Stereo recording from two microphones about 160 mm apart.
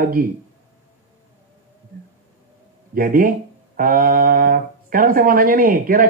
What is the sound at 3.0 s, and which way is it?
Speech, 60° right (ahead or behind).